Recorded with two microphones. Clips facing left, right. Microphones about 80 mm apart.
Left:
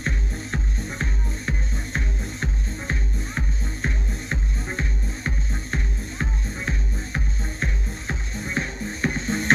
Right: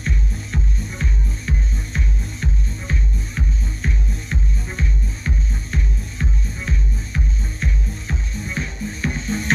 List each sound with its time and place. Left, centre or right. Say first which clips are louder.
0.0 s music: right 1 dB; left